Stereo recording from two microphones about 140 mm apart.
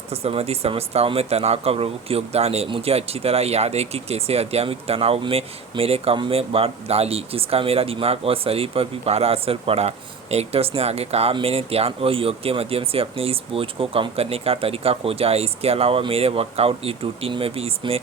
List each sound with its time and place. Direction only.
0.1 s speech: 45° right (ahead or behind)